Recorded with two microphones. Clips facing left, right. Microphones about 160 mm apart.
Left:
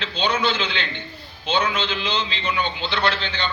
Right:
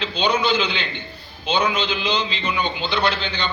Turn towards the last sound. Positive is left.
turn(degrees=-10)  # may be behind; listen again after turning